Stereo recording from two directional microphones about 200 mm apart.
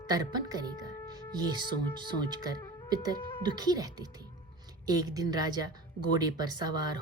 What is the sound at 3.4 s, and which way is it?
A woman's voice, 20° right (ahead or behind).